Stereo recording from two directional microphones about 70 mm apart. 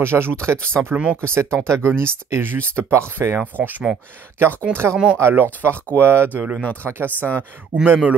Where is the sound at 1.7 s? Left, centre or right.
Right.